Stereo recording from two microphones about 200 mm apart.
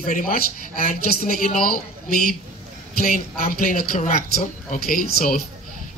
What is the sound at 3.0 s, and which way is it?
Speech, 45° left (ahead or behind).